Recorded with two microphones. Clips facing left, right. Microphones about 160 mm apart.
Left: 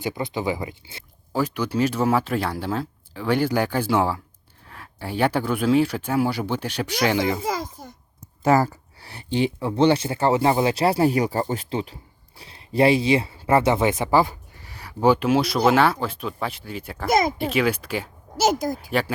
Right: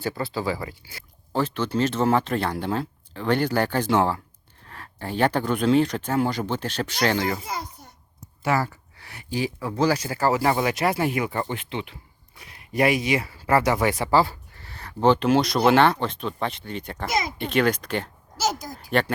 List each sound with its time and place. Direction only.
0.0 s speech: 15° left (ahead or behind)
1.3 s speech: 10° left (ahead or behind)
7.4 s a sound: 90° left
8.4 s speech: 40° left (ahead or behind); by 17.1 s 5° left (ahead or behind)
17.1 s speech: 50° left (ahead or behind)
17.3 s speech: 5° left (ahead or behind)